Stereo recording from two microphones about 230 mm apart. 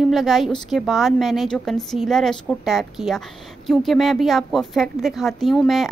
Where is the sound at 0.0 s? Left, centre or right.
Centre.